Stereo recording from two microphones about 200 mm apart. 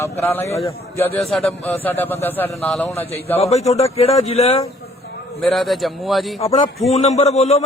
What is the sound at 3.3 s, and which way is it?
A man's voice, 30° left (ahead or behind).